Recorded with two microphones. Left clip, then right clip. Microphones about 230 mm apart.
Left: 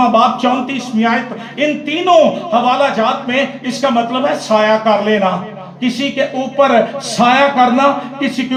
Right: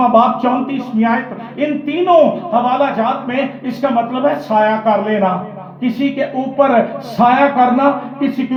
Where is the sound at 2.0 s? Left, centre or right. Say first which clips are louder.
Left 1 dB; left.